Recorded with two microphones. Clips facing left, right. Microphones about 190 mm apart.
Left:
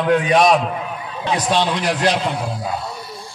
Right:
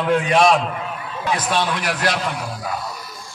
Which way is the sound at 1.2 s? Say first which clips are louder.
Left 3 dB; 20° left (ahead or behind).